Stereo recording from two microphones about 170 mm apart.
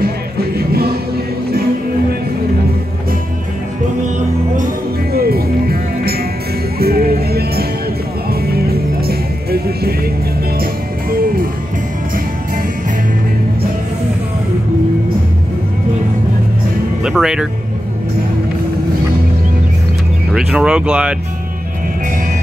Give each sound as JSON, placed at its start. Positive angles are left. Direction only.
{"t": 0.0, "sound": "music", "side_deg": -65}
{"t": 5.1, "sound": "music", "side_deg": -65}
{"t": 17.0, "sound": "music", "side_deg": -5}
{"t": 20.3, "sound": "speech", "side_deg": -5}